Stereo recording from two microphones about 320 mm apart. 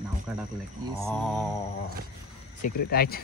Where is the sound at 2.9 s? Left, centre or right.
Left.